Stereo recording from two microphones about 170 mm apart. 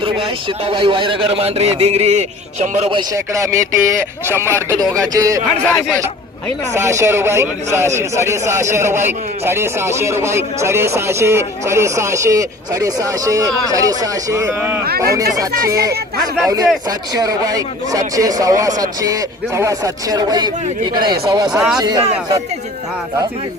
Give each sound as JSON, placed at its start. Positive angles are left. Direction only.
{"t": 0.0, "sound": "a man's voice", "side_deg": -30}
{"t": 3.3, "sound": "a man's voice", "side_deg": -20}
{"t": 5.6, "sound": "speech", "side_deg": 10}
{"t": 6.7, "sound": "a man's voice", "side_deg": -15}
{"t": 14.8, "sound": "speech", "side_deg": -65}
{"t": 15.1, "sound": "a man's voice", "side_deg": -20}
{"t": 17.2, "sound": "a man's voice", "side_deg": -20}
{"t": 21.5, "sound": "speech", "side_deg": -5}
{"t": 21.8, "sound": "a man's voice", "side_deg": -25}